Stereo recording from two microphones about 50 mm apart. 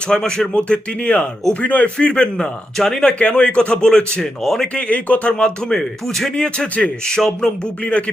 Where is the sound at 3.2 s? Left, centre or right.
Left.